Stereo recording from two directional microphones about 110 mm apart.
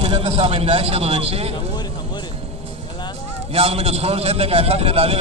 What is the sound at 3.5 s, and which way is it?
A man's voice, 65° right (ahead or behind).